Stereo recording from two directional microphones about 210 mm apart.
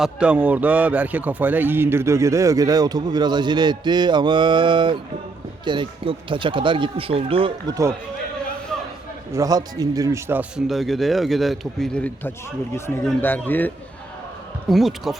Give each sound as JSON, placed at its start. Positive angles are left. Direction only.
{"t": 0.0, "sound": "a man's voice", "side_deg": -5}
{"t": 8.7, "sound": "a sound", "side_deg": 0}
{"t": 9.3, "sound": "a man's voice", "side_deg": -15}
{"t": 10.7, "sound": "a man's voice", "side_deg": 0}